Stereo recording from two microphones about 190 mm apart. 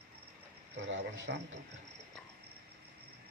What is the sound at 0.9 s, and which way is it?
Speech, 70° right (ahead or behind).